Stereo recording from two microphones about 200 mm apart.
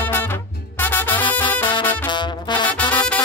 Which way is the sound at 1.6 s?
25° left (ahead or behind).